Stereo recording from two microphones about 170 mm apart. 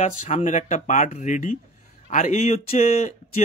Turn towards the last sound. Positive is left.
turn(degrees=40)  # may be behind; listen again after turning